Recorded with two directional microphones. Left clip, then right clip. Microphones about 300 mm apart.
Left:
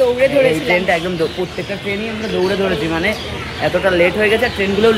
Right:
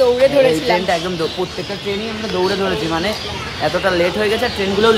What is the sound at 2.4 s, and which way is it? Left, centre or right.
A woman's voice, centre.